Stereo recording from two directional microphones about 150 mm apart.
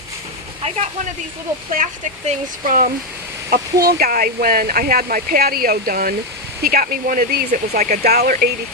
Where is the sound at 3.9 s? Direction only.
90° right; by 8.6 s 75° right (ahead or behind).